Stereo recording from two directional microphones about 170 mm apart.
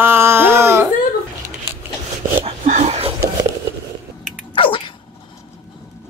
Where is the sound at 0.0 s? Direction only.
15° right (ahead or behind).